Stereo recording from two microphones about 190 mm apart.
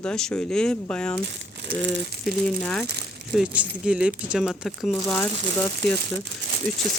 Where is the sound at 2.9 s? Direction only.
60° right (ahead or behind).